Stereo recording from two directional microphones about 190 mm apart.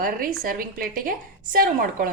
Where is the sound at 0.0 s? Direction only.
50° right (ahead or behind).